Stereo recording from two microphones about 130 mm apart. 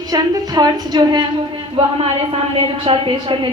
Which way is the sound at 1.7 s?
45° right (ahead or behind).